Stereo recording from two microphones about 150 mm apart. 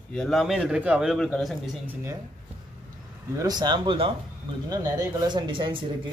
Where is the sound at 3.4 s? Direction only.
25° right (ahead or behind).